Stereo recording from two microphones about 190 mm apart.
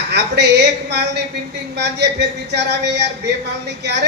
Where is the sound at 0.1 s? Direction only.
65° right (ahead or behind).